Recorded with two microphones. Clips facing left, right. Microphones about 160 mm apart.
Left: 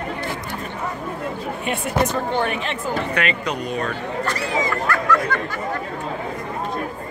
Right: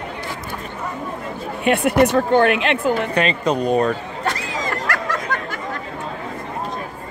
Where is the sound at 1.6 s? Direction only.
70° right (ahead or behind).